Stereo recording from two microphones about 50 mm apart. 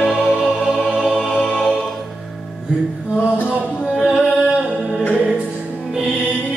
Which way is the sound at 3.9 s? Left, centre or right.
Centre.